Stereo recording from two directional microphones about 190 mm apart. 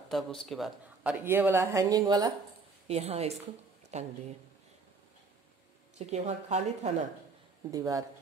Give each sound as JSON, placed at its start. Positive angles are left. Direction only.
{"t": 0.1, "sound": "speech", "side_deg": 0}
{"t": 1.2, "sound": "speech", "side_deg": -10}
{"t": 2.9, "sound": "a woman's voice", "side_deg": -35}
{"t": 5.9, "sound": "a woman's voice", "side_deg": -35}
{"t": 7.7, "sound": "speech", "side_deg": -20}